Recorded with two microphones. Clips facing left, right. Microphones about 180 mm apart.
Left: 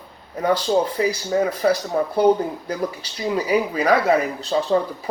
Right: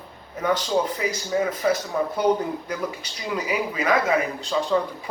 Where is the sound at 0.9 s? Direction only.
35° left (ahead or behind).